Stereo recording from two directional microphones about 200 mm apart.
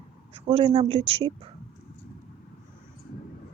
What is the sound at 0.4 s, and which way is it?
Speech, 25° right (ahead or behind).